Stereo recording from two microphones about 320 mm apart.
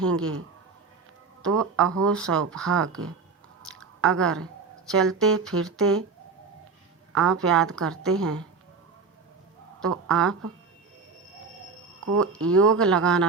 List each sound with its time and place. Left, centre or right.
0.0 s speech: centre
1.4 s speech: centre
3.7 s chewing: centre
4.2 s speech: centre
7.1 s speech: centre
9.8 s speech: centre
11.9 s a sound: right
12.2 s speech: centre